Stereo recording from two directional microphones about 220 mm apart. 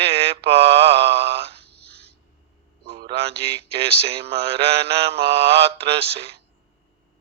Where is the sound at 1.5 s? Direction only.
50° right (ahead or behind).